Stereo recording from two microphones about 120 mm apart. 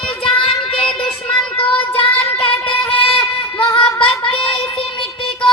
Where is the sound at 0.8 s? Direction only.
10° left (ahead or behind).